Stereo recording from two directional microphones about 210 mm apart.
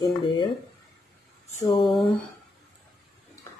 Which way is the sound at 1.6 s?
20° left (ahead or behind).